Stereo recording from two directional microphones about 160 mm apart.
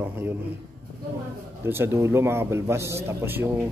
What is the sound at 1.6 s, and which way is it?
A man's voice, 15° right (ahead or behind).